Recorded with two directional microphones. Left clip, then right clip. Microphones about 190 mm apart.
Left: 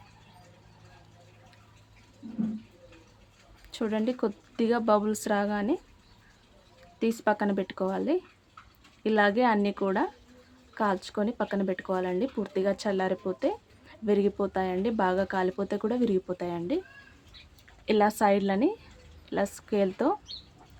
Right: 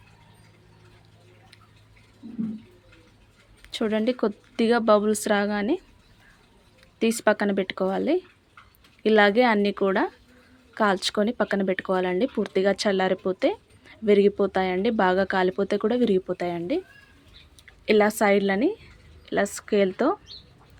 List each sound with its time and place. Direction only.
3.7 s speech: 10° right (ahead or behind)
7.0 s speech: 15° right (ahead or behind)
17.8 s a woman's voice: 10° right (ahead or behind)